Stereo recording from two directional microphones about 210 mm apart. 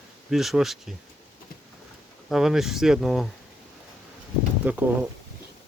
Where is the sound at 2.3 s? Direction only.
Centre (ahead or behind).